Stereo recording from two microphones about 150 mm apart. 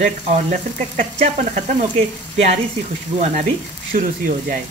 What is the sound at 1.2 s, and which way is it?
Speech, 50° right (ahead or behind).